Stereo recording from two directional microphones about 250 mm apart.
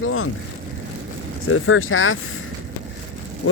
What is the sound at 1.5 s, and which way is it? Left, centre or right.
Speech, left.